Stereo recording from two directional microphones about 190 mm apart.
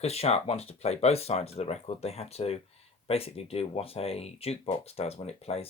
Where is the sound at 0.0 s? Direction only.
35° left (ahead or behind).